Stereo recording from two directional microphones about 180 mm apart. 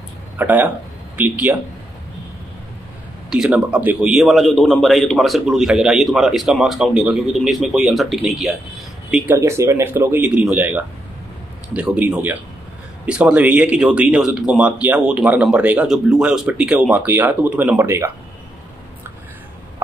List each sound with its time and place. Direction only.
0.4 s speech: 10° right (ahead or behind)
3.3 s a man's voice: 5° right (ahead or behind)
9.3 s speech: 15° right (ahead or behind)